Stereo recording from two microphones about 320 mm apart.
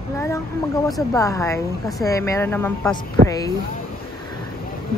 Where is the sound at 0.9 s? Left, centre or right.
Centre.